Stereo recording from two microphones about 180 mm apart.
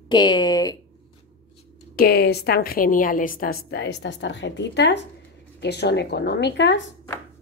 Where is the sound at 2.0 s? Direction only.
60° left (ahead or behind); by 6.8 s 75° left (ahead or behind).